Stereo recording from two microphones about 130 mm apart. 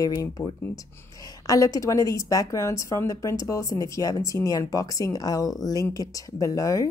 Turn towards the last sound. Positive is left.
turn(degrees=25)  # may be behind; listen again after turning